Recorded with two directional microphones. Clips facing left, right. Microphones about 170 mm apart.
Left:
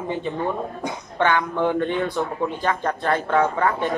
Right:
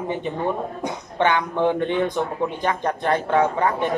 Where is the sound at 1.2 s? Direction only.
20° right (ahead or behind).